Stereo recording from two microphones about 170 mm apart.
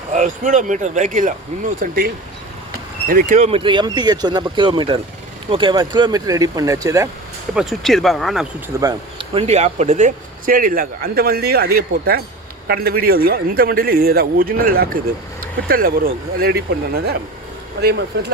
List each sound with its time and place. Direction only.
0.1 s speech: 45° right (ahead or behind); by 7.1 s 20° right (ahead or behind)
7.5 s speech: centre (ahead or behind)
8.8 s speech: 25° right (ahead or behind); by 18.3 s 75° right (ahead or behind)